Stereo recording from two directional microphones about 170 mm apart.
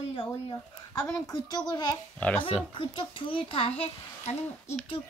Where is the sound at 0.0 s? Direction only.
30° left (ahead or behind).